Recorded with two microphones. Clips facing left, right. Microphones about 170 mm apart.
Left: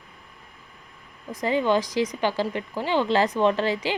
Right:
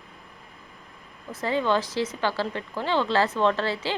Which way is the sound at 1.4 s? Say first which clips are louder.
Left 2 dB; 15° left (ahead or behind).